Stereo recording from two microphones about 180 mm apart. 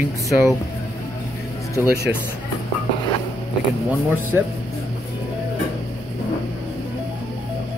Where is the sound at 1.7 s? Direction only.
15° left (ahead or behind).